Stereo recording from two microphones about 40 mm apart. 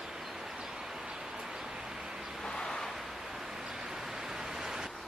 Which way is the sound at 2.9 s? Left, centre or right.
Centre.